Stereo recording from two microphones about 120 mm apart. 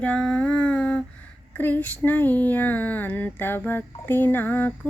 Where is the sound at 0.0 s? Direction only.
5° left (ahead or behind).